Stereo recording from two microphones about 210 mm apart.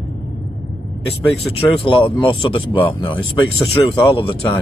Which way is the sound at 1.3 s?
25° left (ahead or behind).